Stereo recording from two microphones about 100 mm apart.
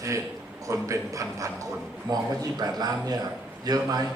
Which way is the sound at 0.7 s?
30° right (ahead or behind).